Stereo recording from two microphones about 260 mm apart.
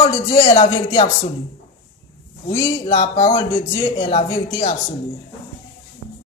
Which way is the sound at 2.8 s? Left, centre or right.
Left.